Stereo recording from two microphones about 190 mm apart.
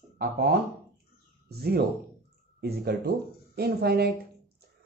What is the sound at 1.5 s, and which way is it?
Speech, 55° right (ahead or behind).